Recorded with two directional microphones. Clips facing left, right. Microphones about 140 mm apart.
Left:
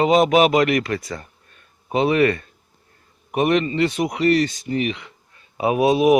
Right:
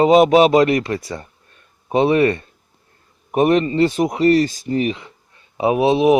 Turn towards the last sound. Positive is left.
turn(degrees=-25)  # may be behind; listen again after turning